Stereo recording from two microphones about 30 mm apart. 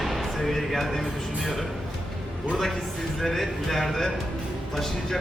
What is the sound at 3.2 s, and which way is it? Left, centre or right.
A man's voice, centre.